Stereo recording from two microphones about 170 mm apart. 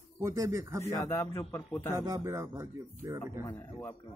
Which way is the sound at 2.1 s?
20° right (ahead or behind).